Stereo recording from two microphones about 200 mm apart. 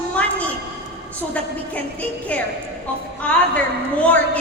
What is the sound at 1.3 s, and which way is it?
A woman's voice, 5° left (ahead or behind).